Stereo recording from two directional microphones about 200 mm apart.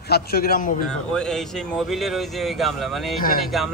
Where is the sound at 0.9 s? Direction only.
5° left (ahead or behind).